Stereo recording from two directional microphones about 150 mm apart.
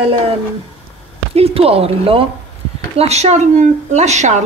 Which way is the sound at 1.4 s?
40° right (ahead or behind).